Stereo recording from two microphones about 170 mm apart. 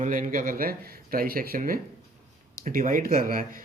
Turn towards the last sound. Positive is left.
turn(degrees=-55)  # may be behind; listen again after turning